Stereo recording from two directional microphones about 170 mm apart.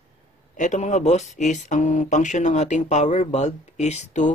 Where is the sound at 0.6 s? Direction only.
45° left (ahead or behind).